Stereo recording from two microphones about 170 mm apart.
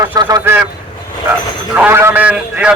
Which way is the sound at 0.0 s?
25° right (ahead or behind).